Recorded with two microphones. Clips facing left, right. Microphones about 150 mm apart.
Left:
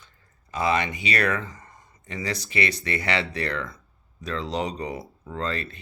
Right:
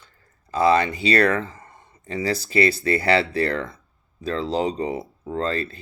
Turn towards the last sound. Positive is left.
turn(degrees=-30)  # may be behind; listen again after turning